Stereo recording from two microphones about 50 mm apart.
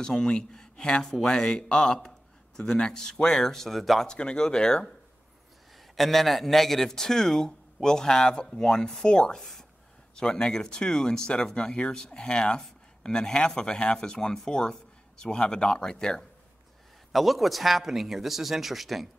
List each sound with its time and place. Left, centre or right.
0.0 s speech: centre
4.1 s speech: centre
5.9 s speech: centre
17.1 s speech: centre